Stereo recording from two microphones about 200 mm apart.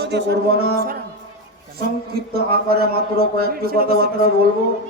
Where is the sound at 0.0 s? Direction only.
55° right (ahead or behind).